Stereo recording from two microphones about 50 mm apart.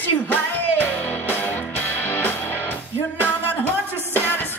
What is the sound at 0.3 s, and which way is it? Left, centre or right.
Music, left.